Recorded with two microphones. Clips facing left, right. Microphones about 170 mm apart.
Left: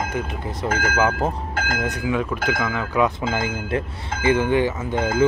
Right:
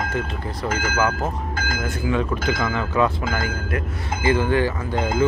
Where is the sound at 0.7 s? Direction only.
55° left (ahead or behind).